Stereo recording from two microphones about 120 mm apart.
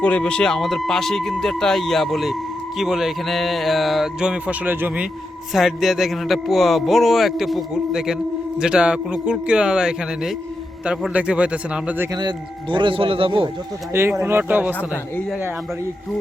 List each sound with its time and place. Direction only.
0.0 s speech: 10° left (ahead or behind); by 5.0 s 15° right (ahead or behind)
5.5 s a man's voice: centre (ahead or behind)
12.7 s a man's voice: 45° right (ahead or behind)
13.9 s a man's voice: 20° right (ahead or behind)